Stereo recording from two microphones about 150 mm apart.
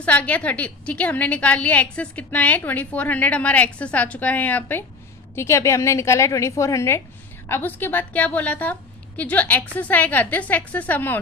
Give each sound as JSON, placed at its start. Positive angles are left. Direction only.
{"t": 0.0, "sound": "a woman's voice", "side_deg": 10}